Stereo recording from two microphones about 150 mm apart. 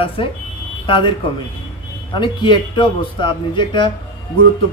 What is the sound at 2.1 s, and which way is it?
A man's voice, 30° left (ahead or behind).